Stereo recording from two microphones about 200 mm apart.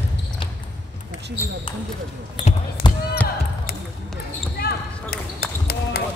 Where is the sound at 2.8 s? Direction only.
20° left (ahead or behind).